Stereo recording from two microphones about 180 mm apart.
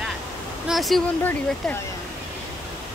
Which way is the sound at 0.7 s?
Centre (ahead or behind).